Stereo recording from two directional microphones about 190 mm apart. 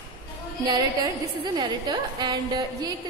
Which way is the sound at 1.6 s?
20° right (ahead or behind).